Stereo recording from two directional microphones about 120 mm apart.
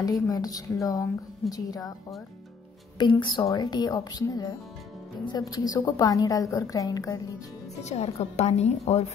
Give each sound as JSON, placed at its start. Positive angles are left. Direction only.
{"t": 0.0, "sound": "a woman's voice", "side_deg": 30}
{"t": 3.0, "sound": "a woman's voice", "side_deg": 40}
{"t": 7.8, "sound": "a woman's voice", "side_deg": 65}